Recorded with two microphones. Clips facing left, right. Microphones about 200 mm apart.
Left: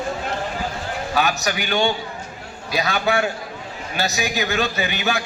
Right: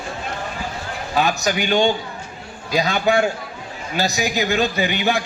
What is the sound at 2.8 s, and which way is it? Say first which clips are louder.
A man's voice: right 3 dB; 30° right (ahead or behind).